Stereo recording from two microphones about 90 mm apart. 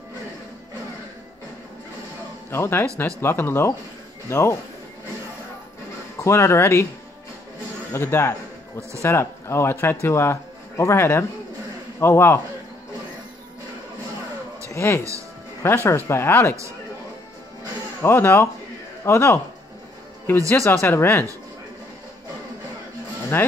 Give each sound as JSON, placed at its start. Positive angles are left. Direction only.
{"t": 2.5, "sound": "speech", "side_deg": 30}
{"t": 6.2, "sound": "speech", "side_deg": 30}
{"t": 7.9, "sound": "speech", "side_deg": 30}
{"t": 14.7, "sound": "speech", "side_deg": 35}
{"t": 18.0, "sound": "speech", "side_deg": 30}
{"t": 23.3, "sound": "speech", "side_deg": 25}